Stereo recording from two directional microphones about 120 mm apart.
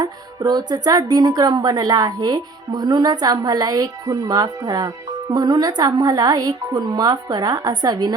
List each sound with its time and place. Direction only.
0.0 s speech: 35° right (ahead or behind)